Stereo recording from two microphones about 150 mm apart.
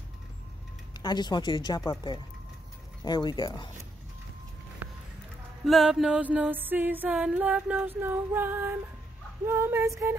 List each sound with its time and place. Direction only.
0.9 s speech: 30° left (ahead or behind)
5.7 s music: centre (ahead or behind); by 10.1 s 20° right (ahead or behind)